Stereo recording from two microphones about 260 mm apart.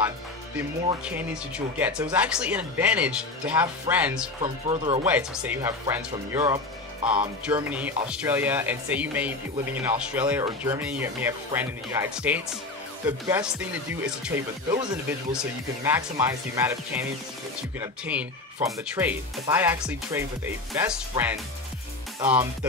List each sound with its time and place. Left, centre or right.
1.0 s speech: centre
4.4 s speech: centre
5.0 s speech: centre